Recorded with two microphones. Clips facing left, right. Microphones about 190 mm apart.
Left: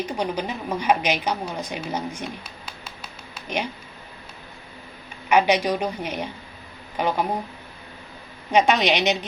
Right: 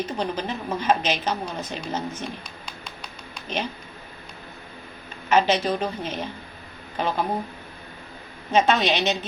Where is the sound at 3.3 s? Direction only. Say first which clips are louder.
Left 1 dB; 10° left (ahead or behind).